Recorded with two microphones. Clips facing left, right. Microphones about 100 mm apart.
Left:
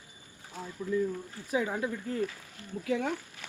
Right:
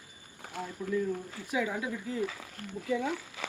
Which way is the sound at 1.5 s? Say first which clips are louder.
Left 1 dB; 35° left (ahead or behind).